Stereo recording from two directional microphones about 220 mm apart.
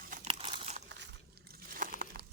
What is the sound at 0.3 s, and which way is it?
Crumpling, 25° right (ahead or behind).